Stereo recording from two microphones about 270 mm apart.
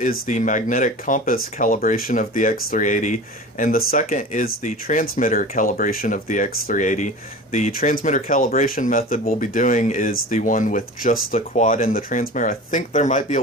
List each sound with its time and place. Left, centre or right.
0.0 s speech: left